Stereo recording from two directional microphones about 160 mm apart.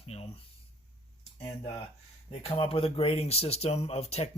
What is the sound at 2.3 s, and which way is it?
Speech, 40° left (ahead or behind).